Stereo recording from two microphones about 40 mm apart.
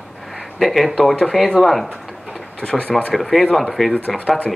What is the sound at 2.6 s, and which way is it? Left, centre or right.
Speech, left.